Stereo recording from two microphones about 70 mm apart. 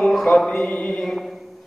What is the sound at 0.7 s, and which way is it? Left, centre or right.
Mantra, centre.